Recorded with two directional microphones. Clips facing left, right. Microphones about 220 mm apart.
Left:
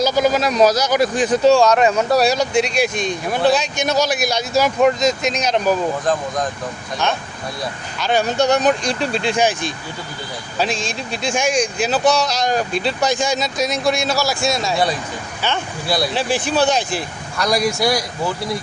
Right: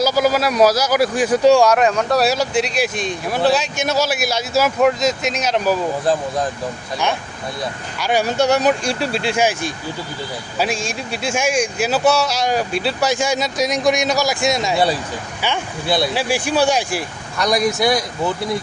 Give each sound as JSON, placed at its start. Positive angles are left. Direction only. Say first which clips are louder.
{"t": 0.0, "sound": "speech", "louder": "even", "side_deg": -5}
{"t": 1.8, "sound": "speech", "louder": "left 1 dB", "side_deg": 5}
{"t": 7.9, "sound": "speech", "louder": "even", "side_deg": -10}